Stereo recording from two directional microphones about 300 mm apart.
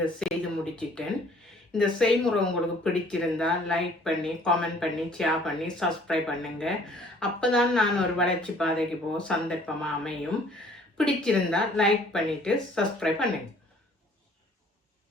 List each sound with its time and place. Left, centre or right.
0.0 s speech: centre